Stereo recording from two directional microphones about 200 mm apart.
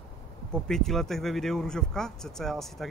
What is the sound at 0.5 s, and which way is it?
Speech, centre (ahead or behind).